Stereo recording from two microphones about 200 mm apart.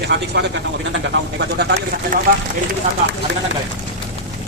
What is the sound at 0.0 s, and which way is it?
Speech, 55° right (ahead or behind).